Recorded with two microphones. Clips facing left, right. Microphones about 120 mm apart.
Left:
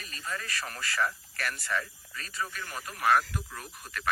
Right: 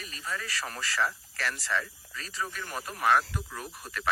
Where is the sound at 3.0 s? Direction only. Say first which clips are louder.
Even; centre (ahead or behind).